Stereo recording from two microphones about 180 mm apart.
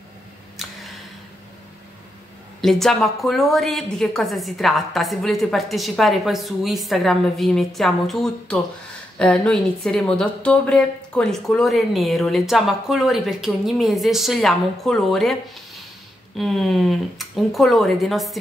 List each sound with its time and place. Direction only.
2.6 s a woman's voice: centre (ahead or behind)